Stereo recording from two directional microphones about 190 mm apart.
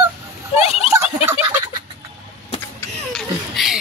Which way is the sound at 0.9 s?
10° right (ahead or behind).